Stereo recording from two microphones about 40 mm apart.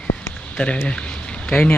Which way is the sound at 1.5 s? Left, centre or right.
Left.